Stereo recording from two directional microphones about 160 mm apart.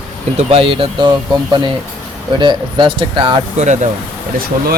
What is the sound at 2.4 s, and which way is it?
Speech, 30° right (ahead or behind).